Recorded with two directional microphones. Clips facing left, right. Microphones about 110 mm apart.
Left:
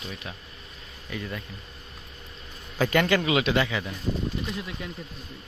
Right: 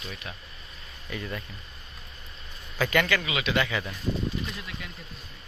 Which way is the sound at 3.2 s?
45° left (ahead or behind).